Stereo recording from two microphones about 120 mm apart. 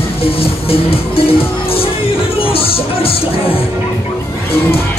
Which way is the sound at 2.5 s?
50° left (ahead or behind).